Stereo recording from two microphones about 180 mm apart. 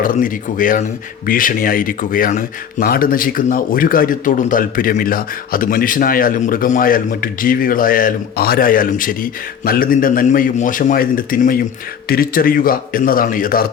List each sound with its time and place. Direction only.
0.0 s speech: 50° left (ahead or behind)